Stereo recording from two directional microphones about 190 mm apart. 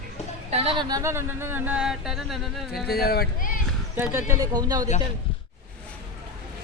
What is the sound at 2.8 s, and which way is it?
Speech, 55° left (ahead or behind).